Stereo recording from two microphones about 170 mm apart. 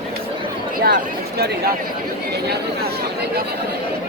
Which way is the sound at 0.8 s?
70° right (ahead or behind).